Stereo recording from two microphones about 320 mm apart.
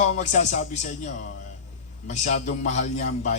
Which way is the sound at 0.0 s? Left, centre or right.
Left.